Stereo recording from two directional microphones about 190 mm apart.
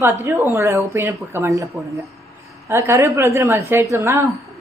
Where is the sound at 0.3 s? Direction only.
15° right (ahead or behind).